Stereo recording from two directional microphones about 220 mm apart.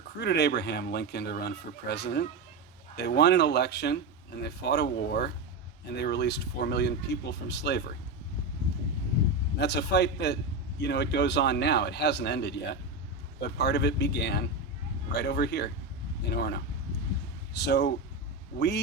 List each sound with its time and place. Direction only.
0.2 s speech: 50° left (ahead or behind)
9.6 s speech: 50° left (ahead or behind)